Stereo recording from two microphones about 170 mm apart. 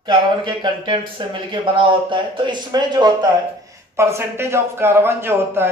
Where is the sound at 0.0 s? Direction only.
30° right (ahead or behind).